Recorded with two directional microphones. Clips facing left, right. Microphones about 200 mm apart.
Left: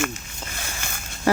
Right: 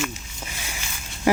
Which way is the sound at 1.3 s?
15° right (ahead or behind).